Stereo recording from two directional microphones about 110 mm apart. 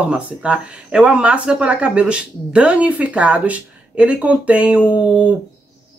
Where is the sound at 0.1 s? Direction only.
10° right (ahead or behind).